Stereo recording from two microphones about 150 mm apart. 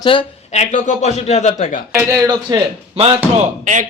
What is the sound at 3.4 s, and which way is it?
Speech, 55° right (ahead or behind).